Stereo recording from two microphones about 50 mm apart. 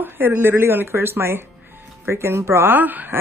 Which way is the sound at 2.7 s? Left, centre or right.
Right.